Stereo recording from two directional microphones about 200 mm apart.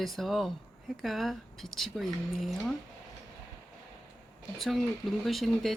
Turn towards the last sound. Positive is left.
turn(degrees=0)  # may be behind; listen again after turning